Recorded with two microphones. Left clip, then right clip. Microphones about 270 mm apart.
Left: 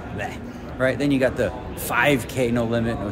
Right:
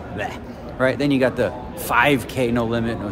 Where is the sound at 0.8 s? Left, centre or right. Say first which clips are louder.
Right 2 dB; centre.